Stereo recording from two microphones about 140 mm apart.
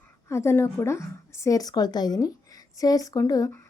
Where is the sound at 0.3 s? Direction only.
20° left (ahead or behind).